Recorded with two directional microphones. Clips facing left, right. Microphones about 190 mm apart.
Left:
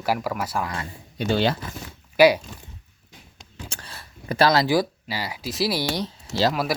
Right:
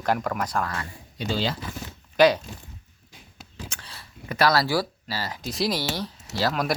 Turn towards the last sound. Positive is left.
turn(degrees=20)  # may be behind; listen again after turning